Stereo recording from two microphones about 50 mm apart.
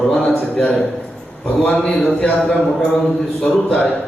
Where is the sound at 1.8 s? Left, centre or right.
Centre.